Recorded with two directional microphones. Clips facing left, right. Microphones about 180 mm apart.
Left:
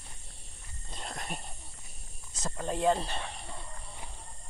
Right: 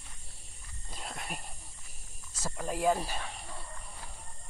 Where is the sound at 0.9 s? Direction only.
5° right (ahead or behind).